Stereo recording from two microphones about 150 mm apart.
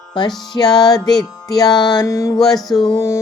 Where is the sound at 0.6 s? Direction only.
25° left (ahead or behind).